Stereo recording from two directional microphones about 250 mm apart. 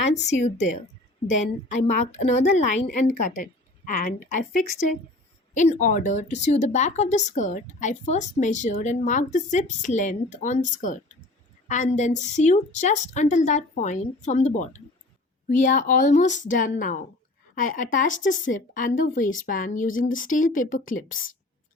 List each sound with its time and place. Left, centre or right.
0.1 s a woman's voice: left